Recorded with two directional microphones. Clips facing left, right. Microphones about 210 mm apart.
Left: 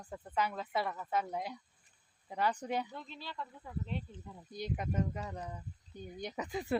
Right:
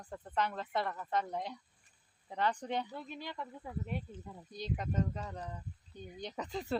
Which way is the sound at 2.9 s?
10° right (ahead or behind).